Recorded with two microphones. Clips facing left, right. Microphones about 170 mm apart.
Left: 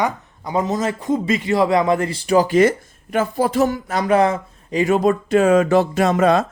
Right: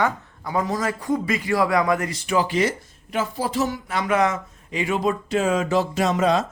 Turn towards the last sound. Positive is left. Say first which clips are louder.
# left 4 dB
turn(degrees=60)  # may be behind; listen again after turning